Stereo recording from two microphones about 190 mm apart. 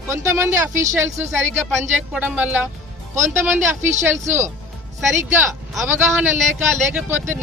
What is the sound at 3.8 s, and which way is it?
Speech, 40° right (ahead or behind).